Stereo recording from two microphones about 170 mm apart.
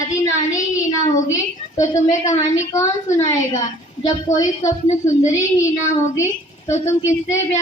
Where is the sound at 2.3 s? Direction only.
20° left (ahead or behind).